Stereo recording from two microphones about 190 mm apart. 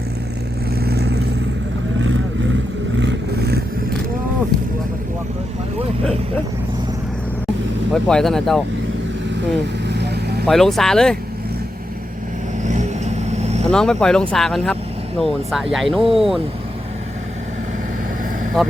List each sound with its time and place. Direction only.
0.9 s vehicle: 60° right (ahead or behind)
3.0 s vehicle: 65° right (ahead or behind)
8.0 s speech: 5° left (ahead or behind)
9.9 s vehicle: 60° right (ahead or behind)
10.4 s speech: centre (ahead or behind)
12.6 s vehicle: 40° right (ahead or behind)
13.7 s speech: 5° left (ahead or behind)
18.6 s speech: centre (ahead or behind)